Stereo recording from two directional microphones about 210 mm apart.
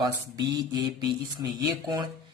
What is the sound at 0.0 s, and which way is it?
Speech, 20° right (ahead or behind).